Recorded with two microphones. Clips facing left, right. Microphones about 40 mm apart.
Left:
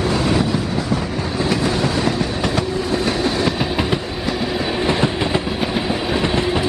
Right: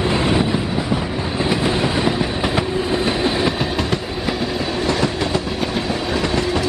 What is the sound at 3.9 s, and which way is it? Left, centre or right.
Train, centre.